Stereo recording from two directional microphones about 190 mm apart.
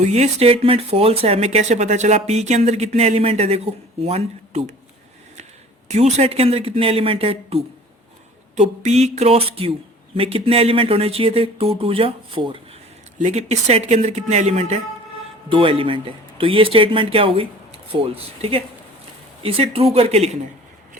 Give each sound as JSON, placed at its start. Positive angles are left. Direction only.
{"t": 0.0, "sound": "speech", "side_deg": -35}
{"t": 5.9, "sound": "speech", "side_deg": -35}